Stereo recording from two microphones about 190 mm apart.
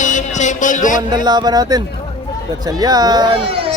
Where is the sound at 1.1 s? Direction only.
20° right (ahead or behind).